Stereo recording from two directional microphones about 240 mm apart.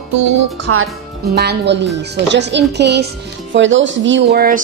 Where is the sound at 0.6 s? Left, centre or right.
Right.